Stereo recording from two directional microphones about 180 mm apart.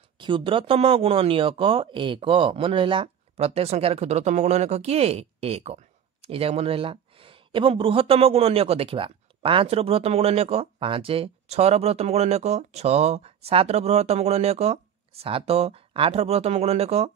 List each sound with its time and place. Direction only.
0.2 s speech: 30° right (ahead or behind)